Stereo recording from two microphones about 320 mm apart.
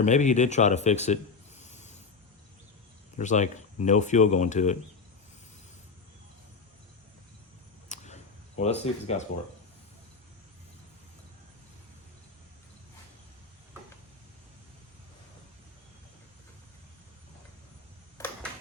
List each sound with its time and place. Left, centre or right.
0.0 s speech: left
1.6 s a sound: left
3.2 s speech: left
7.9 s camera: left